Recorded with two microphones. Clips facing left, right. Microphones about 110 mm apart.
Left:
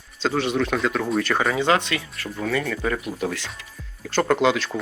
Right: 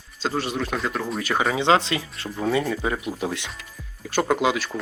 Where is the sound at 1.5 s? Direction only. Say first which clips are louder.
Right 1 dB; 25° right (ahead or behind).